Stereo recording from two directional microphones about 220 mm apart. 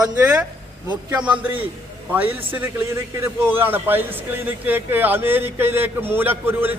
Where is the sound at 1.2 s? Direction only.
5° right (ahead or behind).